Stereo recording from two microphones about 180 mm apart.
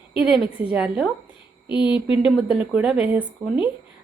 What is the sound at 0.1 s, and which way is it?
Speech, centre (ahead or behind).